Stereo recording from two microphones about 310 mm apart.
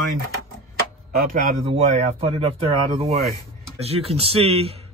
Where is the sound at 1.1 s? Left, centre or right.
Right.